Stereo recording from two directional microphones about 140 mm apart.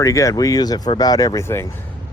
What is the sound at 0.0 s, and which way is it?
Speech, 25° left (ahead or behind).